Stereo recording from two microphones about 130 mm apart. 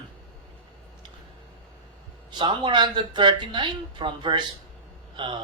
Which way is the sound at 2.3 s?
35° right (ahead or behind).